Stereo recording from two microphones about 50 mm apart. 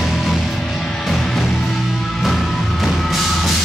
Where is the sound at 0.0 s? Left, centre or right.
Centre.